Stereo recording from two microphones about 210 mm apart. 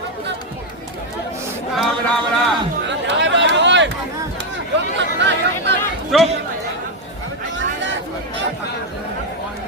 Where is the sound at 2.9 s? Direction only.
60° right (ahead or behind).